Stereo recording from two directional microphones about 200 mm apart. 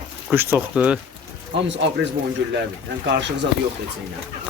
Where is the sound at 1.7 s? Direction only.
60° right (ahead or behind).